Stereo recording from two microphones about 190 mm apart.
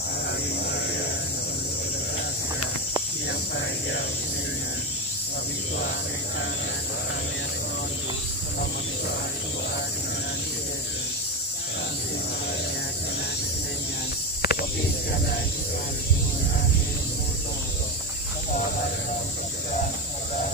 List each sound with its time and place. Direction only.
3.3 s cricket: 65° left (ahead or behind)
14.4 s snake: 55° left (ahead or behind)